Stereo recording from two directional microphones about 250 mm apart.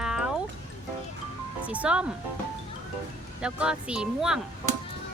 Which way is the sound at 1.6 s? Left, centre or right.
Centre.